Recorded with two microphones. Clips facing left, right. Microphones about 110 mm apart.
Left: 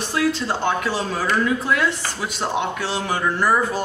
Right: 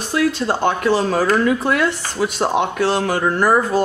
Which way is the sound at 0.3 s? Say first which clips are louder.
Right 4 dB; 50° right (ahead or behind).